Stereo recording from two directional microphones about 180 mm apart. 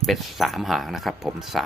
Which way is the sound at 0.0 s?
Centre (ahead or behind).